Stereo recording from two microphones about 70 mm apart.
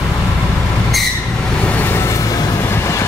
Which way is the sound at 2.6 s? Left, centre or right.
Left.